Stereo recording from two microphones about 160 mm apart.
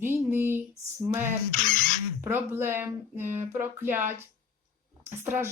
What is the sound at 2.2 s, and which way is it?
Speech, 15° right (ahead or behind).